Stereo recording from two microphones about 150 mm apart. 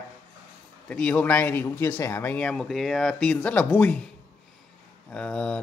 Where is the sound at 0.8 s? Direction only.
10° left (ahead or behind).